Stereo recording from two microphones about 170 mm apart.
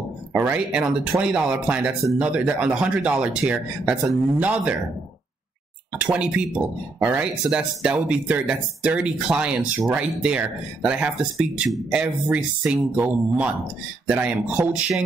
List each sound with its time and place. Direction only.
0.3 s speech: 5° right (ahead or behind)
5.9 s speech: 5° right (ahead or behind)